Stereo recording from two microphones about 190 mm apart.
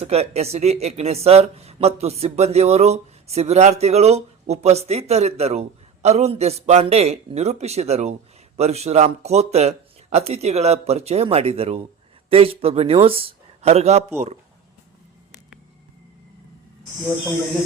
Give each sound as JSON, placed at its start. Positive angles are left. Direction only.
{"t": 0.0, "sound": "speech", "side_deg": -35}